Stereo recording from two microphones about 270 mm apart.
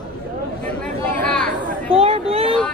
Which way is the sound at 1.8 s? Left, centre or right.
Right.